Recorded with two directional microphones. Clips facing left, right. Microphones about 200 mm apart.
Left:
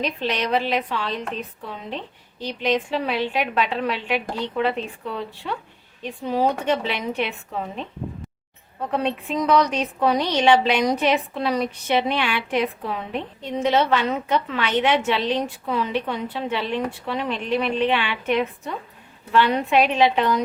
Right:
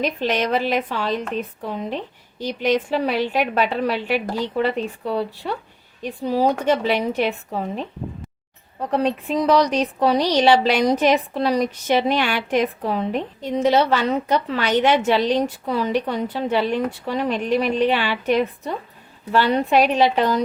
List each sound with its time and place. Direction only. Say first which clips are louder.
0.0 s a woman's voice: right 3 dB; 45° right (ahead or behind)
2.4 s speech: right 3 dB; 45° right (ahead or behind)
8.9 s speech: right 4 dB; 35° right (ahead or behind)